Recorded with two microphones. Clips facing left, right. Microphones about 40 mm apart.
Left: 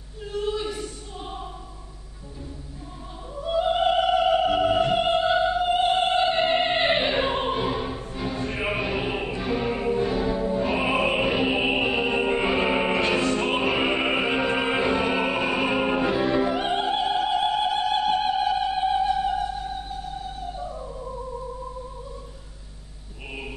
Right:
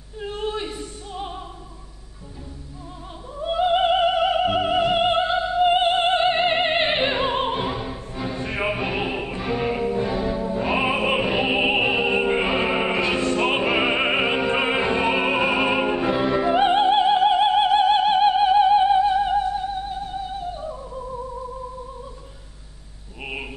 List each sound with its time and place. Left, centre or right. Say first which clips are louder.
0.2 s a sound: even; right
3.3 s opera: right 3 dB; right
7.4 s music: even; centre
10.7 s music: right 6 dB; centre
11.1 s opera: right 1 dB; centre
11.4 s opera: right 3 dB; right
12.6 s music: right 1 dB; centre
13.6 s opera: right 2 dB; centre
15.9 s music: right 1 dB; centre
16.2 s music: right 2 dB; centre
16.5 s opera: right 7 dB; right